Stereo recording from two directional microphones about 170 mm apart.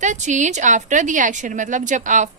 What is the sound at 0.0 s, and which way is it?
A woman's voice, 45° right (ahead or behind).